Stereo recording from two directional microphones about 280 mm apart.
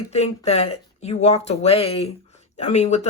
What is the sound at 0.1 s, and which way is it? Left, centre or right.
Speech, left.